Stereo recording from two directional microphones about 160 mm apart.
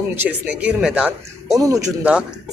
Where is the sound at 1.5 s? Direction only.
20° right (ahead or behind).